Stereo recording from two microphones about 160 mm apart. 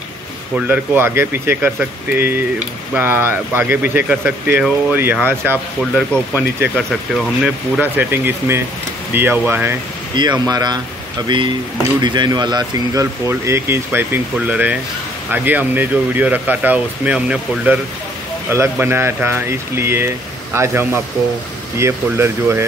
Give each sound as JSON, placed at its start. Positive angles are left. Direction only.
{"t": 0.6, "sound": "speech", "side_deg": -10}
{"t": 6.7, "sound": "speech", "side_deg": 5}
{"t": 10.4, "sound": "speech", "side_deg": -25}